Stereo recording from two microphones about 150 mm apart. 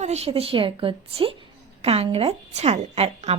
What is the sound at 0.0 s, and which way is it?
A woman's voice, 45° right (ahead or behind).